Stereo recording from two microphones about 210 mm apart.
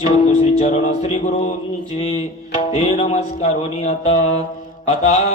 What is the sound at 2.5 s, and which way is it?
Music, 30° left (ahead or behind).